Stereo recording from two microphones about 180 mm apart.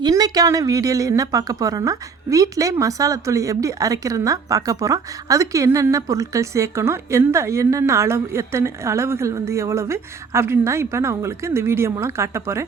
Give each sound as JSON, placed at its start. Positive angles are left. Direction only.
{"t": 0.0, "sound": "speech", "side_deg": -20}